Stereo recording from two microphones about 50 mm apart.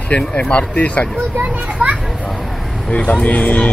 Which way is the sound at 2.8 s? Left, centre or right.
Left.